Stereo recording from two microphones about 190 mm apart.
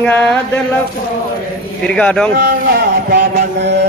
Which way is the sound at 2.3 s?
55° right (ahead or behind).